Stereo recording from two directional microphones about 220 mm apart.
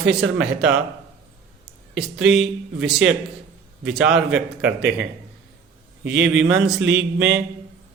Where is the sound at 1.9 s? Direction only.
Centre (ahead or behind).